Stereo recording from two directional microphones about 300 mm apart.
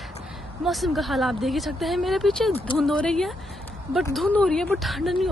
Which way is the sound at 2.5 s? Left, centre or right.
Centre.